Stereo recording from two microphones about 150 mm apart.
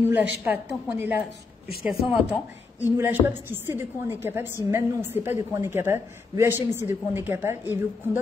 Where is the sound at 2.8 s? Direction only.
15° right (ahead or behind).